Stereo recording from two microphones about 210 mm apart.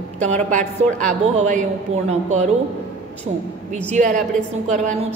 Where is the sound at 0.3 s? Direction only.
35° right (ahead or behind).